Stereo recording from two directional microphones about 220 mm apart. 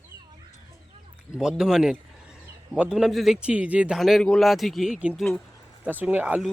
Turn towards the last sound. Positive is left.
turn(degrees=-5)  # may be behind; listen again after turning